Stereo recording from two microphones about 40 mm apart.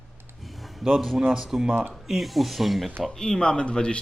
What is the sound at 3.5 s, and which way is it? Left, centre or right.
Speech, left.